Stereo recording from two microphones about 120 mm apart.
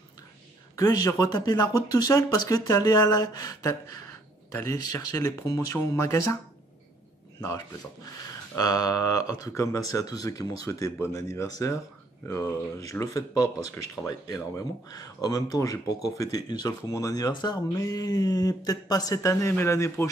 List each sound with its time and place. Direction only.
0.7 s speech: 30° left (ahead or behind)
7.3 s speech: 30° left (ahead or behind)